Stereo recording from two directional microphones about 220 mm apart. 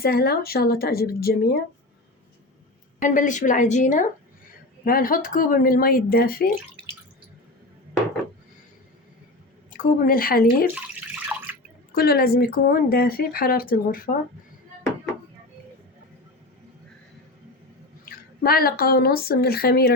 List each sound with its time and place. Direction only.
0.0 s speech: 45° left (ahead or behind)
3.0 s speech: 35° left (ahead or behind)
9.6 s speech: 35° left (ahead or behind)
10.8 s water: 5° right (ahead or behind)
11.9 s speech: 45° left (ahead or behind)
18.0 s a woman's voice: 40° left (ahead or behind)